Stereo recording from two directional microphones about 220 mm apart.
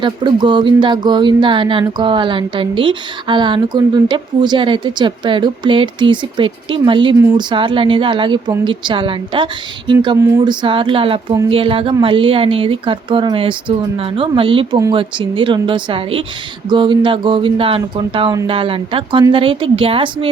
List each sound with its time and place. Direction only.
0.0 s speech: 20° right (ahead or behind)